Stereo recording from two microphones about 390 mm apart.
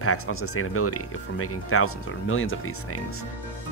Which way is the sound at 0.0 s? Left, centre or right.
Left.